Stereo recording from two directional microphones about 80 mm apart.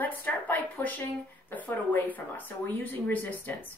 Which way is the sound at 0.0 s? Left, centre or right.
Left.